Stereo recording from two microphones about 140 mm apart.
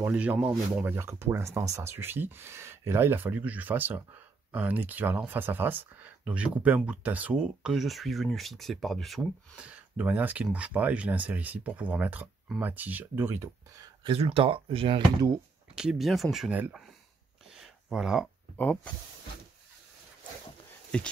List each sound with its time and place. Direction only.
0.0 s speech: 10° right (ahead or behind)
14.0 s speech: 45° right (ahead or behind)
15.7 s speech: 5° right (ahead or behind)
17.6 s a sound: 5° right (ahead or behind)
18.6 s speech: 10° left (ahead or behind)
20.9 s speech: 5° left (ahead or behind)